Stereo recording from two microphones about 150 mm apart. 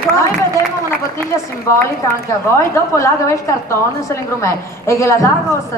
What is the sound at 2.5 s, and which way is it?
A woman's voice, 20° left (ahead or behind).